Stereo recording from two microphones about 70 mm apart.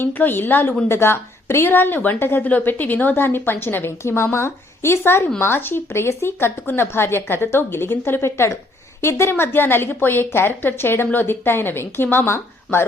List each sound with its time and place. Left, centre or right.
0.0 s a woman's voice: left